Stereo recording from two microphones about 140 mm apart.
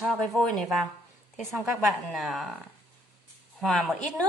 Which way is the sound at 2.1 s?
Centre (ahead or behind).